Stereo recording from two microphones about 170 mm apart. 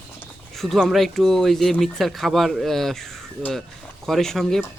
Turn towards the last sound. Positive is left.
turn(degrees=0)  # may be behind; listen again after turning